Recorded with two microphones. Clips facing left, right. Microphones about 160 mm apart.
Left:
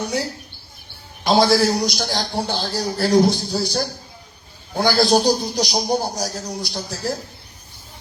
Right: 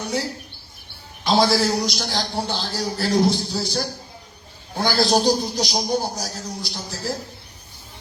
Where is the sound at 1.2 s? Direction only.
45° left (ahead or behind).